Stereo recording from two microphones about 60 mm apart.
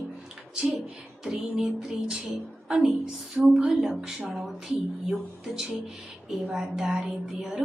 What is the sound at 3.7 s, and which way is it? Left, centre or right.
Speech, centre.